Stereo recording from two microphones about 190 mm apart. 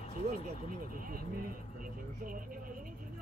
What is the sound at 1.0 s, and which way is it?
Speech, 45° right (ahead or behind).